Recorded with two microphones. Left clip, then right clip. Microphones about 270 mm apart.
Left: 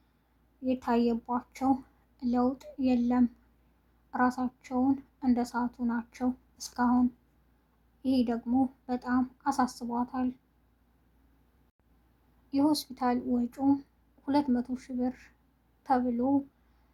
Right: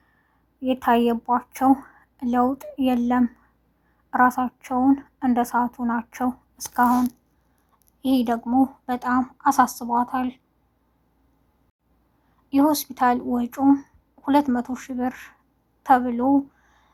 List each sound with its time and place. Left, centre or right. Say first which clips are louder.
0.6 s speech: right 9 dB; right
8.0 s speech: right 8 dB; right
12.5 s speech: right 8 dB; right